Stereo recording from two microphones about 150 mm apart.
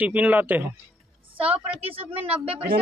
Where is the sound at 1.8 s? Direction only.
40° right (ahead or behind).